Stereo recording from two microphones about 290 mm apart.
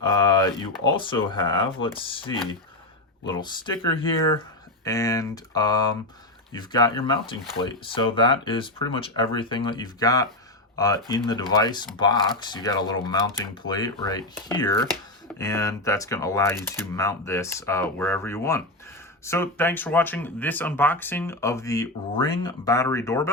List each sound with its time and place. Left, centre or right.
0.0 s speech: centre